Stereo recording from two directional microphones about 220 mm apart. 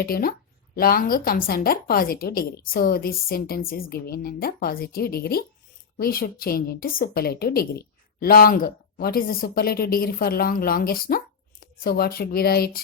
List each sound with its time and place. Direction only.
0.0 s a woman's voice: 40° left (ahead or behind)